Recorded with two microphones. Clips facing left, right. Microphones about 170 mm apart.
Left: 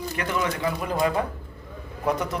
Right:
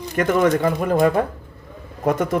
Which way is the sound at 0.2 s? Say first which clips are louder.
Right 11 dB; 50° right (ahead or behind).